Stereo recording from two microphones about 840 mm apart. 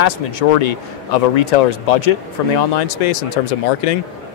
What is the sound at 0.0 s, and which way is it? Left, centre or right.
A man's voice, left.